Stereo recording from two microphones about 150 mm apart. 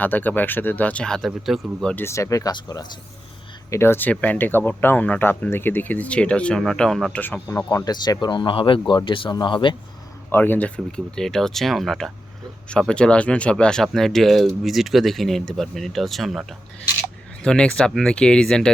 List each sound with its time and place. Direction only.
0.0 s speech: 10° left (ahead or behind)
2.0 s speech: 20° left (ahead or behind)
7.4 s speech: 20° left (ahead or behind)
10.3 s speech: 10° left (ahead or behind)